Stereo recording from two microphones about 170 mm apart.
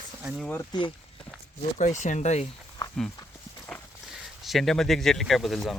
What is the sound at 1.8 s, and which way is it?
Speech, 45° left (ahead or behind).